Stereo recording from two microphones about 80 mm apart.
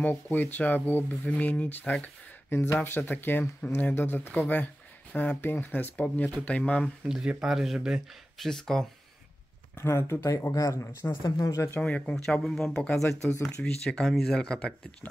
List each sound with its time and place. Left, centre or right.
0.0 s speech: left
2.5 s speech: left
7.1 s speech: centre
8.5 s speech: centre
9.8 s speech: left
11.8 s speech: centre